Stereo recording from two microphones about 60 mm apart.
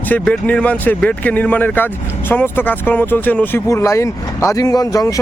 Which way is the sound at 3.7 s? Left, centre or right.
Left.